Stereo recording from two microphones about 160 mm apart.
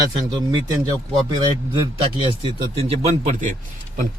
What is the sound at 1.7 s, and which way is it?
A man's voice, 30° right (ahead or behind).